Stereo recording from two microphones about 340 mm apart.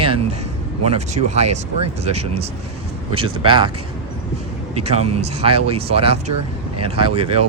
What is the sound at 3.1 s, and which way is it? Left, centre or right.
Speech, centre.